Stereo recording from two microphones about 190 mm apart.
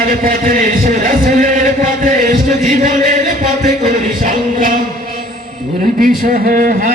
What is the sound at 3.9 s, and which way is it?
Music, 45° right (ahead or behind).